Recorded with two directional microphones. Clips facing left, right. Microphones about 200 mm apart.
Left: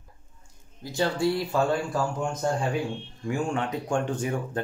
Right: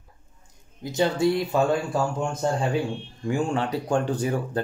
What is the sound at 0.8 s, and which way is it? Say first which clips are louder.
Speech: right 3 dB; 20° right (ahead or behind).